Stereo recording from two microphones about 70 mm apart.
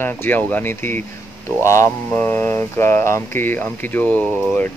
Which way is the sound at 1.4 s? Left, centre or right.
Left.